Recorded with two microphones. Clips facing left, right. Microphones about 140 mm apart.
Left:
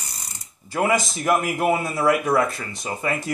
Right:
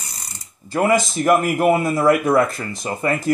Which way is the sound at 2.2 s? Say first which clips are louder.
Right 4 dB; centre (ahead or behind).